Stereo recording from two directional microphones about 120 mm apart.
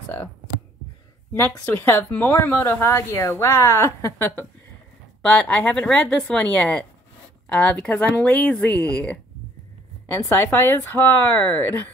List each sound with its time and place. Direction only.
1.7 s speech: 15° left (ahead or behind)
10.3 s speech: 20° left (ahead or behind)